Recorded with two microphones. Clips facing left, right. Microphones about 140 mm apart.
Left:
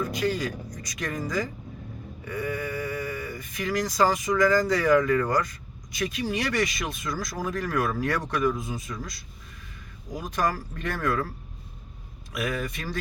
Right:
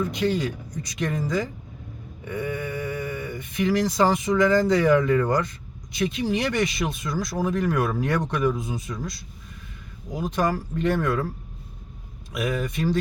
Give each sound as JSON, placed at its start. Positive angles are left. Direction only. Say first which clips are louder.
{"t": 0.0, "sound": "speech", "louder": "right 3 dB", "side_deg": -25}
{"t": 10.1, "sound": "speech", "louder": "right 3 dB", "side_deg": -25}
{"t": 12.3, "sound": "speech", "louder": "right 3 dB", "side_deg": -25}